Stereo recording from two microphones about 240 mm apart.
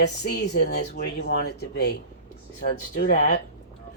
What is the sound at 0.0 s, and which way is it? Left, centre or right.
Speech, left.